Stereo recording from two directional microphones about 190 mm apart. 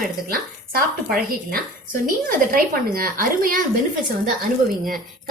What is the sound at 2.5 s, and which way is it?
A woman's voice, 50° right (ahead or behind).